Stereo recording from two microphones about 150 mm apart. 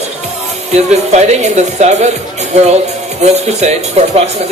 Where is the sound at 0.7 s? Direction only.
45° right (ahead or behind).